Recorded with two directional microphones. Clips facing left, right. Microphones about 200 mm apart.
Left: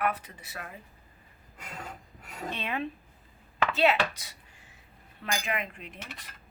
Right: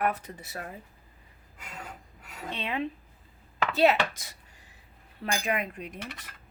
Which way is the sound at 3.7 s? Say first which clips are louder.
Right 3 dB; 40° right (ahead or behind).